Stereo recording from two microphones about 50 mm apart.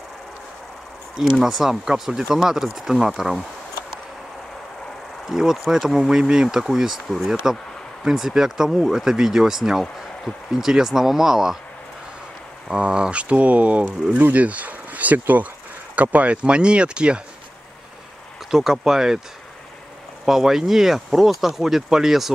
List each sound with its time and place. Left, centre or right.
1.4 s speech: centre
5.2 s speech: centre
12.6 s speech: centre
18.5 s speech: centre
20.2 s speech: centre